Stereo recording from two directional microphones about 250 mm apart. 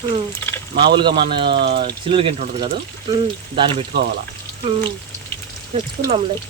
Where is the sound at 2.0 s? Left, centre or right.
Right.